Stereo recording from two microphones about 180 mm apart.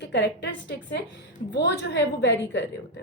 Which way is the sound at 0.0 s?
70° left (ahead or behind).